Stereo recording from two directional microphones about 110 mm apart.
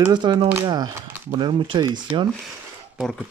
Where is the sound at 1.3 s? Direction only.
45° right (ahead or behind).